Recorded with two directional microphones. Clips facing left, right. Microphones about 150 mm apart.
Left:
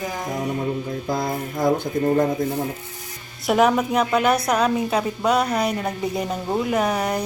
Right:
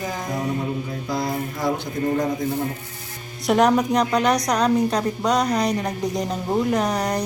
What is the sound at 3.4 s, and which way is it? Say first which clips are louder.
A woman's voice: right 1 dB; centre (ahead or behind).